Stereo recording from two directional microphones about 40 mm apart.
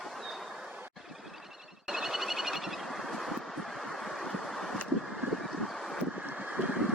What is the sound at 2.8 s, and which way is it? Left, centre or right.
Vehicle, centre.